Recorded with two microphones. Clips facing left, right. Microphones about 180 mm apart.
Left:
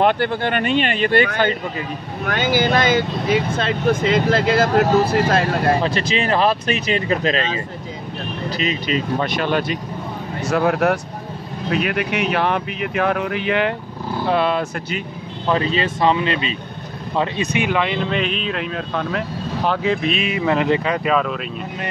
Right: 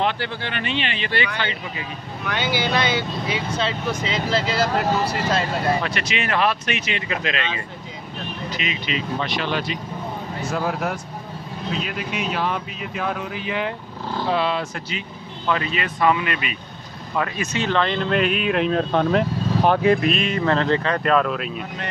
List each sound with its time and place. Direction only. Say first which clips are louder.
0.0 s speech: left 7 dB; 50° left (ahead or behind)
5.8 s speech: left 5 dB; 30° left (ahead or behind); by 9.8 s 50° left (ahead or behind)
10.4 s speech: left 8 dB; 70° left (ahead or behind)
14.3 s speech: left 4 dB; 55° left (ahead or behind)
15.4 s speech: left 5 dB; 30° left (ahead or behind)
17.5 s speech: left 2 dB; 10° left (ahead or behind); by 18.6 s 10° right (ahead or behind)
18.7 s speech: right 5 dB; 35° right (ahead or behind)
19.6 s speech: right 3 dB; 15° right (ahead or behind)
20.0 s speech: even; centre (ahead or behind)